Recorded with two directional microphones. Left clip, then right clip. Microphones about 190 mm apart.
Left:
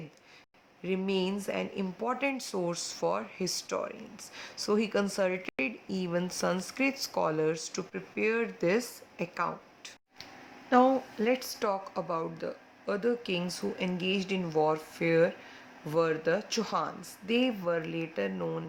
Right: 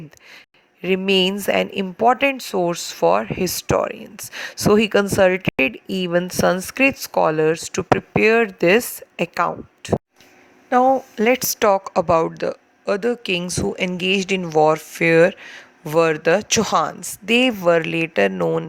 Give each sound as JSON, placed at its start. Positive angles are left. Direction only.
{"t": 0.8, "sound": "speech", "side_deg": -50}
{"t": 10.7, "sound": "speech", "side_deg": -40}